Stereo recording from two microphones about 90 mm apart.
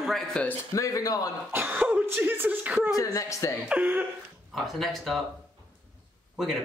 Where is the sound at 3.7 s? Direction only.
15° right (ahead or behind).